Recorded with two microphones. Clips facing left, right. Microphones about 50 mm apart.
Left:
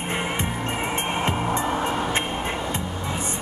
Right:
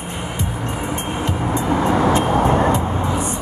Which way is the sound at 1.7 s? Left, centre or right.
Right.